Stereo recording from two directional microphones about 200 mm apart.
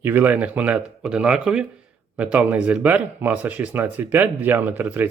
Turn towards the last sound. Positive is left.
turn(degrees=-10)  # may be behind; listen again after turning